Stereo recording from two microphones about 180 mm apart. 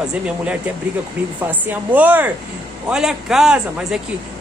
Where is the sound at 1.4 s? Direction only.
10° right (ahead or behind).